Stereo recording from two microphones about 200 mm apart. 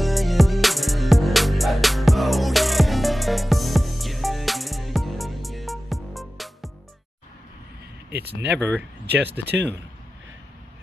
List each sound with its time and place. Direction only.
0.0 s music: centre (ahead or behind)
8.1 s a sound: 55° right (ahead or behind)
8.5 s speech: 5° left (ahead or behind)
9.4 s speech: 55° right (ahead or behind)